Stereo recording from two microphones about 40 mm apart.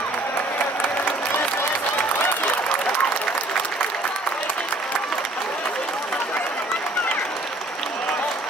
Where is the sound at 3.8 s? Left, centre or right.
Left.